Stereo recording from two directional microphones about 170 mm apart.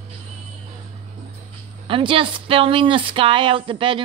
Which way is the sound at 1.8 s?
30° right (ahead or behind).